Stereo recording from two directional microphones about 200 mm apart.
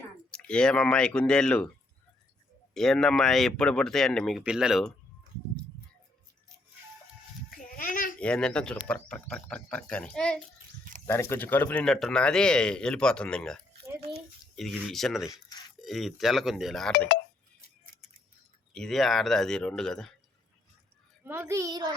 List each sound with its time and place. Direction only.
0.3 s speech: 5° left (ahead or behind)
2.7 s speech: centre (ahead or behind)
7.5 s a sound: 45° left (ahead or behind)
8.2 s speech: 5° left (ahead or behind)
18.7 s speech: centre (ahead or behind)
21.2 s a child's voice: 10° right (ahead or behind)